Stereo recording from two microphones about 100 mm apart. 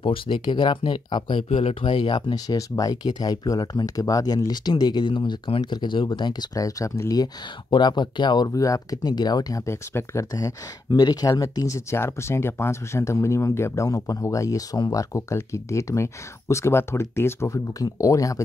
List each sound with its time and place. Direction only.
0.0 s speech: 55° left (ahead or behind)
1.5 s speech: 90° left
1.9 s speech: 55° left (ahead or behind); by 7.2 s 35° left (ahead or behind)
7.7 s speech: 50° left (ahead or behind)
8.5 s speech: 35° left (ahead or behind)
10.9 s speech: 45° left (ahead or behind)